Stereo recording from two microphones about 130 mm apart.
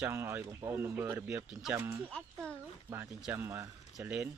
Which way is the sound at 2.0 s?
5° left (ahead or behind).